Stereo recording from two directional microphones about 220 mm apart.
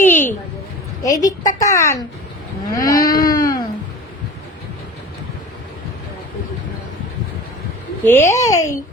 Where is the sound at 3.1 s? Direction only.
40° left (ahead or behind).